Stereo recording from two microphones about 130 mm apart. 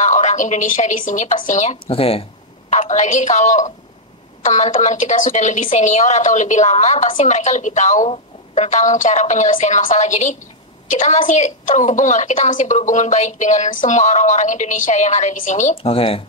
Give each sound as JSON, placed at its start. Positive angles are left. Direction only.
{"t": 0.0, "sound": "a woman's voice", "side_deg": 65}
{"t": 1.9, "sound": "speech", "side_deg": 45}
{"t": 2.7, "sound": "a woman's voice", "side_deg": 70}
{"t": 9.8, "sound": "a woman's voice", "side_deg": 65}
{"t": 15.7, "sound": "speech", "side_deg": 45}